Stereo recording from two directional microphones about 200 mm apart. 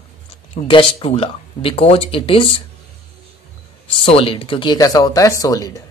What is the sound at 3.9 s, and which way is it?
Speech, 25° left (ahead or behind).